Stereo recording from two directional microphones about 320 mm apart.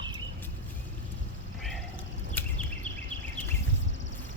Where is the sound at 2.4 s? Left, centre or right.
Centre.